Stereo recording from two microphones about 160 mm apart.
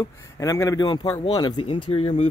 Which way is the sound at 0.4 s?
20° left (ahead or behind).